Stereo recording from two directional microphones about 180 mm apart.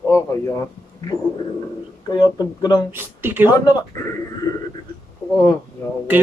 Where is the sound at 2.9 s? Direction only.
10° right (ahead or behind).